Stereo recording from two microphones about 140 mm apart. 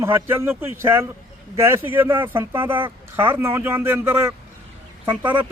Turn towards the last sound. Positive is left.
turn(degrees=-10)  # may be behind; listen again after turning